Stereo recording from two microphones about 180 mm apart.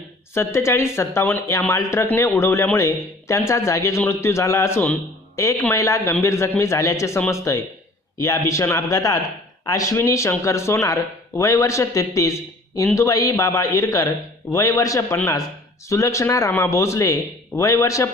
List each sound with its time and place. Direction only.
0.3 s a man's voice: 15° left (ahead or behind)